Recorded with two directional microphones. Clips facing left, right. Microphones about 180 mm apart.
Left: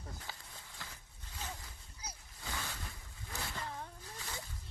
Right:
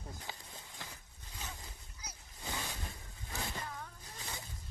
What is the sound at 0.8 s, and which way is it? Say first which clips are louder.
Vehicle: right 1 dB; 20° right (ahead or behind).